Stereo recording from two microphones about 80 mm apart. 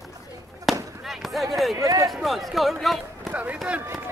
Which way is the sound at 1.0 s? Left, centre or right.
Centre.